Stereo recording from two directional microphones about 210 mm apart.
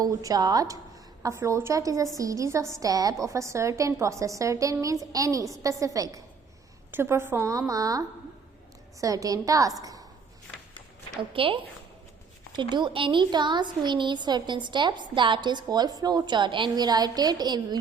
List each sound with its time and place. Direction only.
0.0 s a woman's voice: 15° right (ahead or behind)
11.2 s a woman's voice: 25° right (ahead or behind)